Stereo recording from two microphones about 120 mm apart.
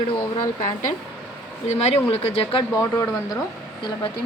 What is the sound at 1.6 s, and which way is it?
Speech, 65° left (ahead or behind).